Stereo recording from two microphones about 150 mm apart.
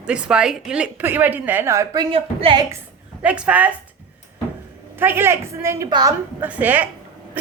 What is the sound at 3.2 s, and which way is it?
Speech, 10° right (ahead or behind).